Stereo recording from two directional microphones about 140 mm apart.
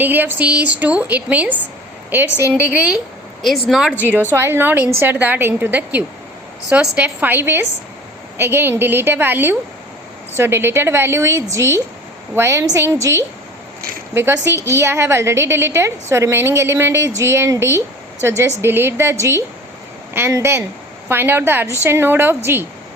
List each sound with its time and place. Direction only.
0.0 s a woman's voice: 15° right (ahead or behind)